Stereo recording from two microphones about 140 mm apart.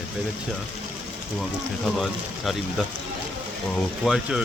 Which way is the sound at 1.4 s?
Centre (ahead or behind).